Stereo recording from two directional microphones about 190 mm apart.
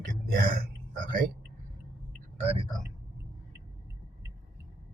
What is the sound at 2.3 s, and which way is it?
Speech, 35° right (ahead or behind).